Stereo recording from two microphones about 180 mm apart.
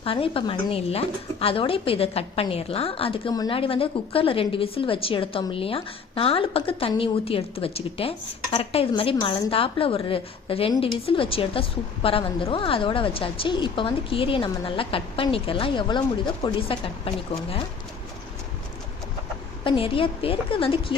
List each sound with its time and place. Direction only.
0.0 s a woman's voice: 30° left (ahead or behind)
19.6 s a woman's voice: 30° left (ahead or behind)